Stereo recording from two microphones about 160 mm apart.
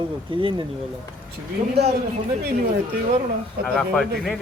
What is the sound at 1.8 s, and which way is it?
Speech, 90° right.